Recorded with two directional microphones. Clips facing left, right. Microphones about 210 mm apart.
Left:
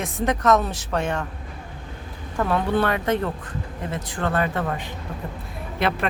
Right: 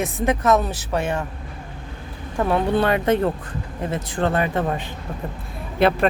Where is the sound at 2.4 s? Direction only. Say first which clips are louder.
Right 2 dB; 20° right (ahead or behind).